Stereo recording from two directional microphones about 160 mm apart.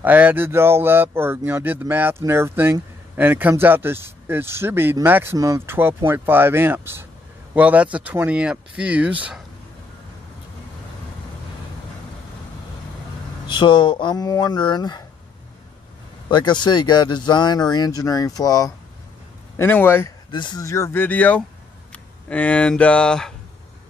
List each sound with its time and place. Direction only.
0.0 s speech: 10° right (ahead or behind)
13.5 s speech: 30° left (ahead or behind)
16.3 s speech: 30° left (ahead or behind); by 20.1 s 15° left (ahead or behind)
20.2 s speech: 30° left (ahead or behind); by 23.3 s 5° left (ahead or behind)